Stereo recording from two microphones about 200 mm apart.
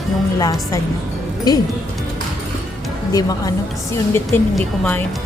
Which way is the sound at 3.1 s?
20° left (ahead or behind).